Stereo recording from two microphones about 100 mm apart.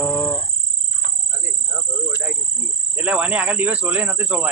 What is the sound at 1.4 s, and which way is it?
Cricket, 20° right (ahead or behind).